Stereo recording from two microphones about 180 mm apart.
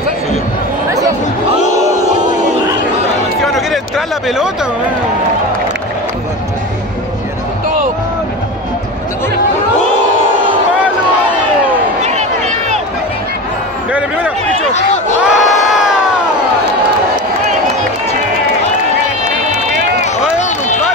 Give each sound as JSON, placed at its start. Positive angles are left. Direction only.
{"t": 3.5, "sound": "a sound", "side_deg": 0}
{"t": 12.0, "sound": "run", "side_deg": -40}
{"t": 13.9, "sound": "a sound", "side_deg": -10}
{"t": 15.2, "sound": "crowd", "side_deg": 0}
{"t": 19.2, "sound": "run", "side_deg": -40}
{"t": 20.3, "sound": "run", "side_deg": 40}